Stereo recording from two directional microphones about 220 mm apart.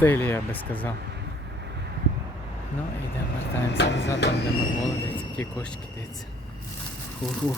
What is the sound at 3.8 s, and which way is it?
Speech, 50° left (ahead or behind).